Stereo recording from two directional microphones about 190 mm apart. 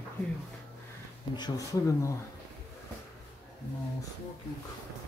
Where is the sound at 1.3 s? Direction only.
20° left (ahead or behind).